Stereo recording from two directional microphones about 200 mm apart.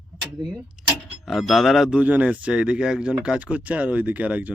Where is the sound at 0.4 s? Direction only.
Centre (ahead or behind).